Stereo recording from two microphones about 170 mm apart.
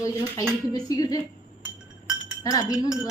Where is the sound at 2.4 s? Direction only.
20° left (ahead or behind).